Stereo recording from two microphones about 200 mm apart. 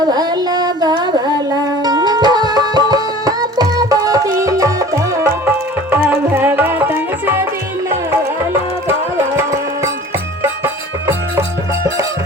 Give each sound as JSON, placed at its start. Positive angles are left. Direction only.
{"t": 0.0, "sound": "music", "side_deg": -20}
{"t": 9.1, "sound": "music", "side_deg": -15}